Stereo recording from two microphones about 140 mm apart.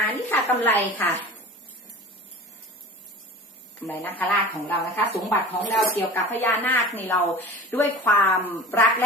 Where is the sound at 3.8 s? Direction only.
15° left (ahead or behind).